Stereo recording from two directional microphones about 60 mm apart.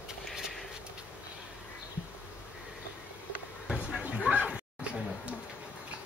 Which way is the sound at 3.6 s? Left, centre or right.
Centre.